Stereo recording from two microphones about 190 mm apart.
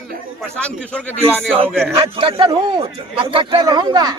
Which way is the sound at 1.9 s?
30° right (ahead or behind).